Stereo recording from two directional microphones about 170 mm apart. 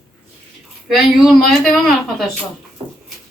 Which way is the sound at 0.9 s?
Centre (ahead or behind).